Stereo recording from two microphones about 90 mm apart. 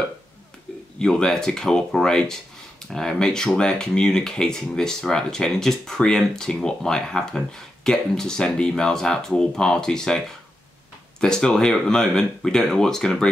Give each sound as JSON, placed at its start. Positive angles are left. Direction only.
{"t": 0.9, "sound": "speech", "side_deg": 10}